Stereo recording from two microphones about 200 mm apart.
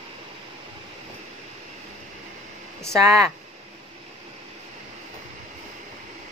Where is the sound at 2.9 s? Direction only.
15° right (ahead or behind).